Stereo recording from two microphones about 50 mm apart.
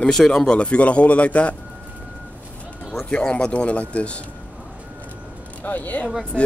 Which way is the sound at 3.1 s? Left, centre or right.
Centre.